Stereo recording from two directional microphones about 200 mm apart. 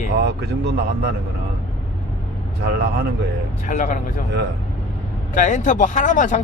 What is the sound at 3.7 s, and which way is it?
Speech, 40° left (ahead or behind).